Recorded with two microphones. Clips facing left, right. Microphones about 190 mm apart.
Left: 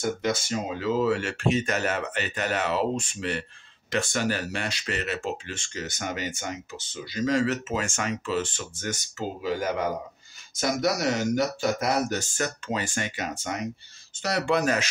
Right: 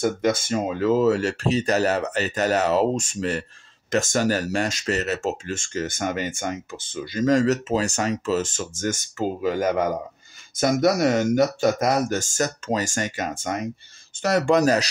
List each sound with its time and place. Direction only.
0.0 s speech: 55° right (ahead or behind); by 14.9 s 35° right (ahead or behind)